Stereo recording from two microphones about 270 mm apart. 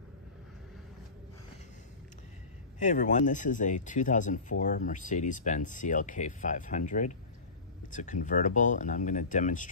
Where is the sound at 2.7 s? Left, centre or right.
Left.